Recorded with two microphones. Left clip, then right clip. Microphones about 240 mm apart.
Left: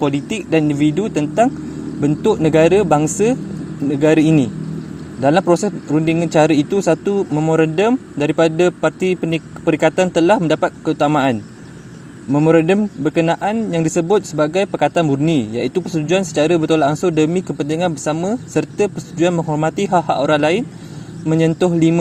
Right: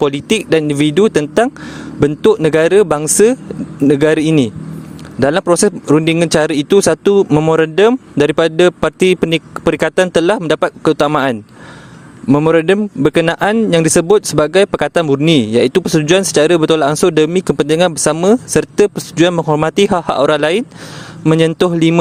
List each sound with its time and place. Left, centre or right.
0.0 s a man's voice: right
7.1 s speech: right
7.4 s a man's voice: right
19.4 s a man's voice: right